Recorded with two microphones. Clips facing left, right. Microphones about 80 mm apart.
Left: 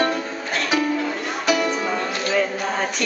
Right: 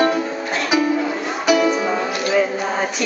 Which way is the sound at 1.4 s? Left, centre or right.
Centre.